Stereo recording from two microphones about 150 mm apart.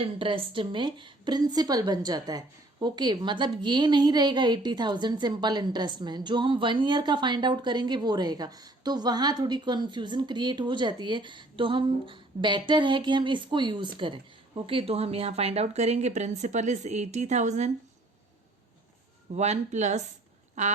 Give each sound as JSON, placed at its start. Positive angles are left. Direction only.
{"t": 0.0, "sound": "a woman's voice", "side_deg": -35}
{"t": 19.3, "sound": "speech", "side_deg": -50}